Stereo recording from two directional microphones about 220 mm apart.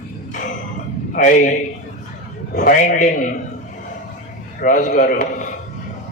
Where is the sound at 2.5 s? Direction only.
35° left (ahead or behind).